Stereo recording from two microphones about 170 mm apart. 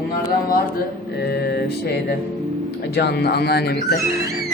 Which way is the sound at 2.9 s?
70° left (ahead or behind).